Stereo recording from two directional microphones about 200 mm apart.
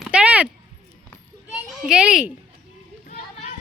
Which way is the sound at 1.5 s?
5° right (ahead or behind).